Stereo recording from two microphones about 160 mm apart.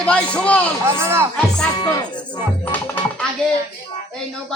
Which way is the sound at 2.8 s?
10° left (ahead or behind).